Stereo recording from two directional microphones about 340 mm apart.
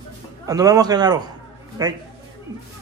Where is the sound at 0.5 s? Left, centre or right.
Centre.